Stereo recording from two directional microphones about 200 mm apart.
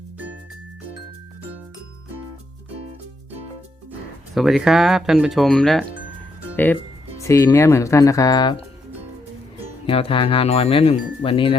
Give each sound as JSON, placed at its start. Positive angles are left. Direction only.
{"t": 4.4, "sound": "speech", "side_deg": 0}
{"t": 7.2, "sound": "speech", "side_deg": 15}
{"t": 9.8, "sound": "speech", "side_deg": 25}